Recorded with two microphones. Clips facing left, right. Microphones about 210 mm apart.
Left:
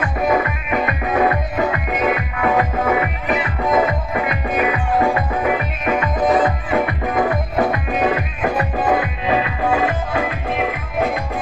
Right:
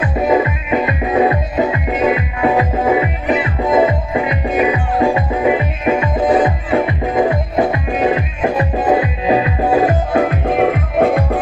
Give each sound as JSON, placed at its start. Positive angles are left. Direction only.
{"t": 0.0, "sound": "music", "side_deg": -20}